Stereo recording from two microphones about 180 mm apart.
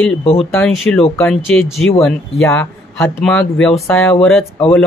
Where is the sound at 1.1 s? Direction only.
5° left (ahead or behind).